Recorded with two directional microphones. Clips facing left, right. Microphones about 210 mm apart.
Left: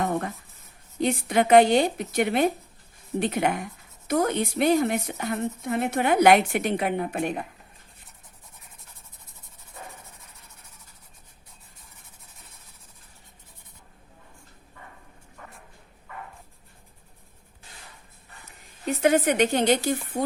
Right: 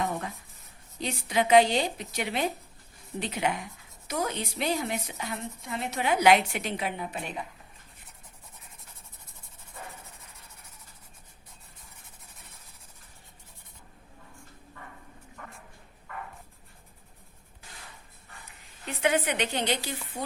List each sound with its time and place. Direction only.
0.0 s writing: 55° left (ahead or behind)
0.9 s speech: 55° left (ahead or behind)
18.9 s speech: 45° left (ahead or behind)